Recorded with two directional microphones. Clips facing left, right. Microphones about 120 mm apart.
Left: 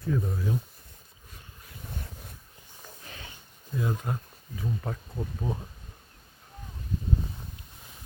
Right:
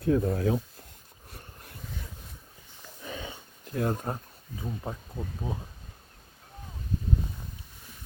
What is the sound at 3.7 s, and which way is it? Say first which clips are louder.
Speech: right 2 dB; 60° right (ahead or behind).